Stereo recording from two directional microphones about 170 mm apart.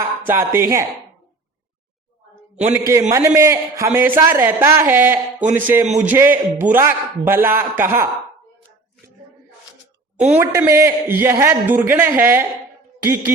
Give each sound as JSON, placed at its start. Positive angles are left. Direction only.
{"t": 0.3, "sound": "a man's voice", "side_deg": -15}
{"t": 2.7, "sound": "a man's voice", "side_deg": -15}
{"t": 5.8, "sound": "a man's voice", "side_deg": -40}
{"t": 6.1, "sound": "a man's voice", "side_deg": -10}
{"t": 10.2, "sound": "a man's voice", "side_deg": -10}